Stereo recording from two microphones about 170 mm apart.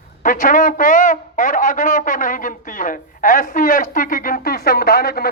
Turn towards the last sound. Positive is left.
turn(degrees=65)  # may be behind; listen again after turning